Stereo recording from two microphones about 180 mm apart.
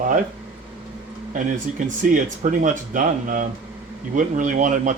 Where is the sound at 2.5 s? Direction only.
45° right (ahead or behind).